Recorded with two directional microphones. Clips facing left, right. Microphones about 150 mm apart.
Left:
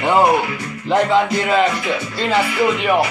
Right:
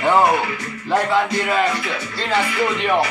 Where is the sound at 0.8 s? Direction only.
20° left (ahead or behind).